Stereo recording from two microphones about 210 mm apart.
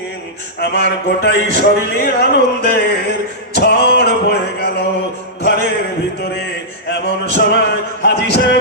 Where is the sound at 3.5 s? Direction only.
50° left (ahead or behind).